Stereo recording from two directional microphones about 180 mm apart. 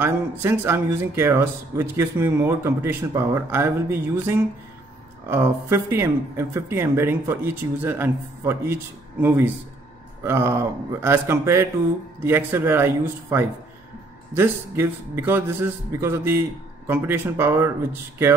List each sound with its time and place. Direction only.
0.0 s speech: 15° right (ahead or behind)
10.2 s speech: 15° right (ahead or behind)